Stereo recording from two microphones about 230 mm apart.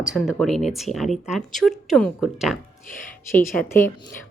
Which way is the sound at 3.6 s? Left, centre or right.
Centre.